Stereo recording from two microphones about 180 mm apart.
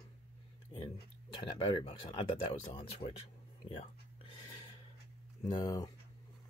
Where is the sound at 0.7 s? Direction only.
30° left (ahead or behind).